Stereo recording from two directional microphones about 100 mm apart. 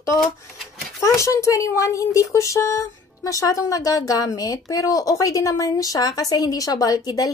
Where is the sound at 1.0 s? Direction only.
30° left (ahead or behind).